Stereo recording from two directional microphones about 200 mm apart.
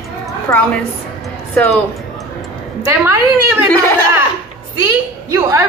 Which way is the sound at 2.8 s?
15° right (ahead or behind).